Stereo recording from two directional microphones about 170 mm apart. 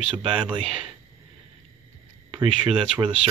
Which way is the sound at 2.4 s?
30° right (ahead or behind).